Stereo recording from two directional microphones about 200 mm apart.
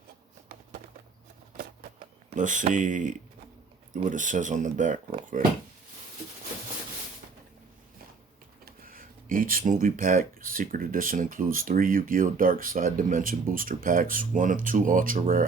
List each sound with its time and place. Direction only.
2.3 s speech: 40° right (ahead or behind)
8.6 s speech: 45° right (ahead or behind)